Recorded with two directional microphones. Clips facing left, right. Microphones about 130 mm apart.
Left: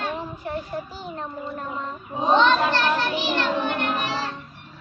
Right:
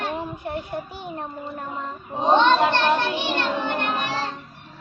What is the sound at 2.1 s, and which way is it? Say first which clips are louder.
Child singing: right 1 dB; 20° right (ahead or behind).